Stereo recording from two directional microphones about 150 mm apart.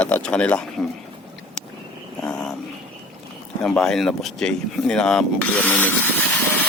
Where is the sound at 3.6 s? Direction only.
5° left (ahead or behind).